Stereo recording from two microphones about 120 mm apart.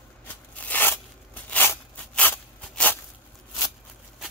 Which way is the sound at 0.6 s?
15° left (ahead or behind).